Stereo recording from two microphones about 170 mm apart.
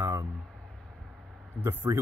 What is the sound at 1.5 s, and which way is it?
Speech, 15° right (ahead or behind).